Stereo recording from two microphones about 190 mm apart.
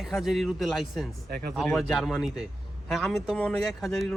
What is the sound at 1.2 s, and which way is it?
Speech, 50° right (ahead or behind).